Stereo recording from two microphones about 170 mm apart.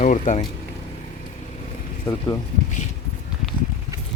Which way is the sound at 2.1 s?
15° left (ahead or behind).